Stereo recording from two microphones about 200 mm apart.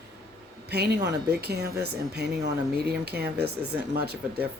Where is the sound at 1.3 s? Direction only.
55° right (ahead or behind).